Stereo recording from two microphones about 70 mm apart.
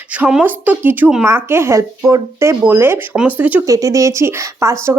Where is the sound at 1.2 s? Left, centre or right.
Right.